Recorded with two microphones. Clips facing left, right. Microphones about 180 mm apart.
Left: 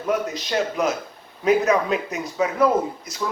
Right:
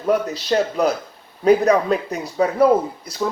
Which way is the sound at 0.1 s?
35° right (ahead or behind).